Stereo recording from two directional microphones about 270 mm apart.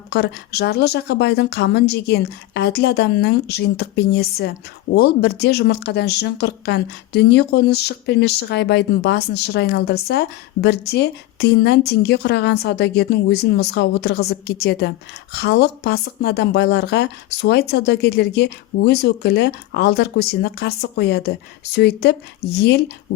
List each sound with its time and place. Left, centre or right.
0.1 s speech: left